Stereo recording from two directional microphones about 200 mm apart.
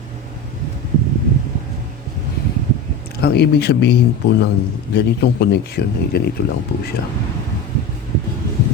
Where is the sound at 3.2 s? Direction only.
55° left (ahead or behind).